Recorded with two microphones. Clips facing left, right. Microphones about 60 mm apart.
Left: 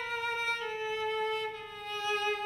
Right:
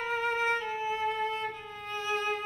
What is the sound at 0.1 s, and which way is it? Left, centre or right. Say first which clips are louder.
Music: right 6 dB; right.